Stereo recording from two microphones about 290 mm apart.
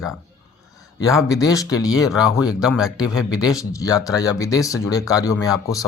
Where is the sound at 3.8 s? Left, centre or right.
Centre.